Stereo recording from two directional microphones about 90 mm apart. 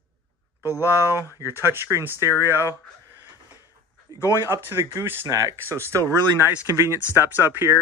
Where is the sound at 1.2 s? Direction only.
30° left (ahead or behind).